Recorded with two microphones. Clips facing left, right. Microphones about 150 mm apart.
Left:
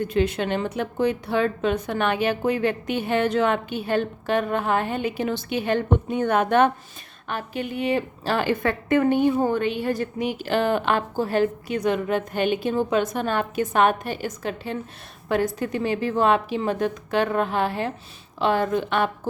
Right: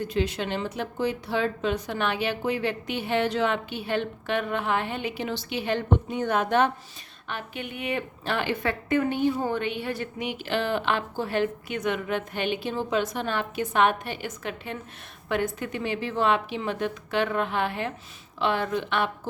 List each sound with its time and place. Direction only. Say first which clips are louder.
0.0 s a woman's voice: left 5 dB; 55° left (ahead or behind)
7.3 s a woman's voice: left 6 dB; 40° left (ahead or behind)